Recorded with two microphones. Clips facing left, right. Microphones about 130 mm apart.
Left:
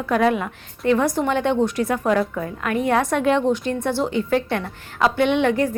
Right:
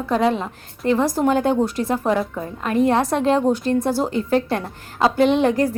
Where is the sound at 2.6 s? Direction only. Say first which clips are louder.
Right 3 dB; 30° right (ahead or behind).